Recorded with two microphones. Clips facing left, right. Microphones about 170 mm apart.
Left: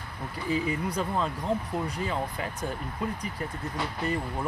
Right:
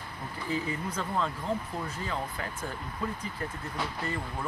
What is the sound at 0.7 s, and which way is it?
Speech, 15° left (ahead or behind).